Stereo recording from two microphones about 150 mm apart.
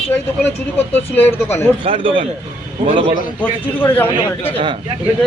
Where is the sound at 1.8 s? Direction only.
35° right (ahead or behind).